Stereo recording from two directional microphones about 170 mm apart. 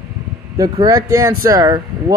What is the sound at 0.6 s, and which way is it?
Speech, 20° right (ahead or behind).